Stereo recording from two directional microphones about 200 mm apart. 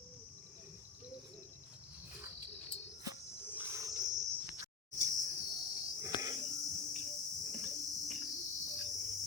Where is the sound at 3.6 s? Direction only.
15° right (ahead or behind).